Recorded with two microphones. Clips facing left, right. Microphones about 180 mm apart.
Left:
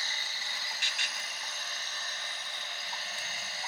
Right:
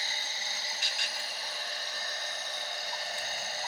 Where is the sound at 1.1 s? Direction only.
30° right (ahead or behind).